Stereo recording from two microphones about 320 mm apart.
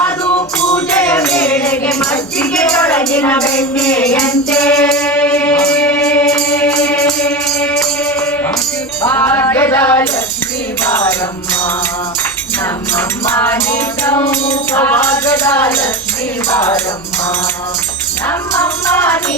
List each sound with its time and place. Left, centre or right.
0.3 s music: centre
0.9 s music: centre
9.0 s music: centre
12.9 s music: centre
18.3 s music: centre